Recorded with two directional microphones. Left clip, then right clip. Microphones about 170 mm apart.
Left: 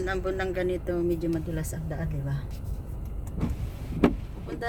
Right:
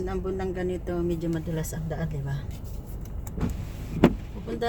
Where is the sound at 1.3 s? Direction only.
15° right (ahead or behind).